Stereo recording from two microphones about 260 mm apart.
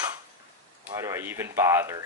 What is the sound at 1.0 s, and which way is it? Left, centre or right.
Speech, centre.